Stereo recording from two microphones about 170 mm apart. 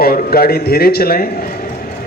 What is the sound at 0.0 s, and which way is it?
A man's voice, 60° left (ahead or behind).